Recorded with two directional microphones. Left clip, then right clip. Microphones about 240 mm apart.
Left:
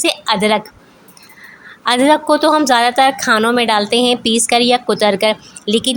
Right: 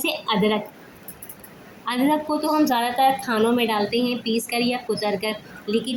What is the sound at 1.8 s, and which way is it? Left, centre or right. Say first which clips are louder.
A woman's voice: left 10 dB; left.